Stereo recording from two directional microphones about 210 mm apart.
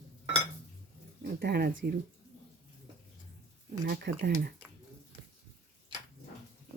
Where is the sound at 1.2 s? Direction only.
50° right (ahead or behind).